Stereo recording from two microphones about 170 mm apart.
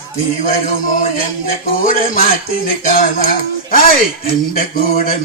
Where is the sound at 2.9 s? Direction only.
50° left (ahead or behind).